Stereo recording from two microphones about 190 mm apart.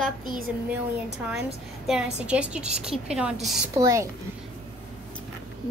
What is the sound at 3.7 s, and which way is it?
Speech, 15° right (ahead or behind).